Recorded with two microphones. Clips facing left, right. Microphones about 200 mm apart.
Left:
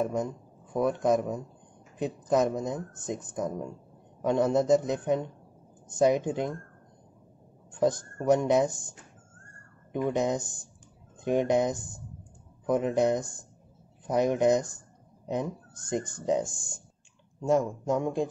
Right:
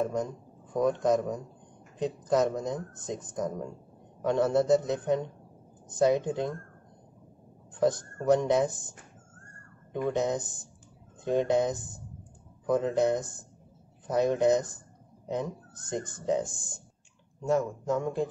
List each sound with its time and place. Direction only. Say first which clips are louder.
0.0 s speech: left 1 dB; 10° left (ahead or behind)
7.8 s speech: even; 10° left (ahead or behind)
10.0 s speech: left 1 dB; 10° left (ahead or behind)